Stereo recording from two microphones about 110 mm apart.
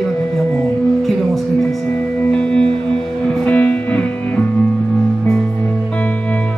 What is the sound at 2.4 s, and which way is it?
Music, 10° left (ahead or behind).